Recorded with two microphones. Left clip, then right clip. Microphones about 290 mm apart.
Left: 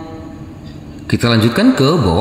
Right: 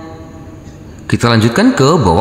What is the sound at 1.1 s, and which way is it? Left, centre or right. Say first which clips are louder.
Speech: right 2 dB; centre.